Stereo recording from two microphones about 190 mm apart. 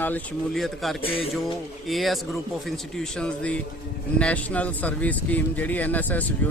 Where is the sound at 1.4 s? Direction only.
Centre (ahead or behind).